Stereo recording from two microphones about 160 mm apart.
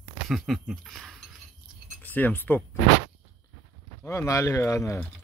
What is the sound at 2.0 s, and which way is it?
Speech, 10° left (ahead or behind).